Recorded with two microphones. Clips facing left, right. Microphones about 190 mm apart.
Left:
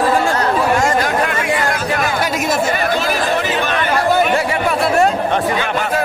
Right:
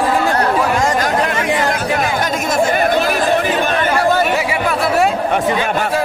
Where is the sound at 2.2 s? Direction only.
5° left (ahead or behind).